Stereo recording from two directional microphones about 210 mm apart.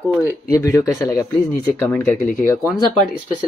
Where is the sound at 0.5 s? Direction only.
15° left (ahead or behind); by 3.1 s centre (ahead or behind).